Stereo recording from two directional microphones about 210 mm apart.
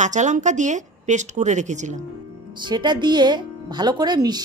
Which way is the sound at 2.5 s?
20° right (ahead or behind).